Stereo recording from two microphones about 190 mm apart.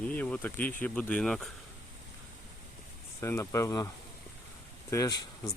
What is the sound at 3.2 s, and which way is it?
Speech, 15° left (ahead or behind).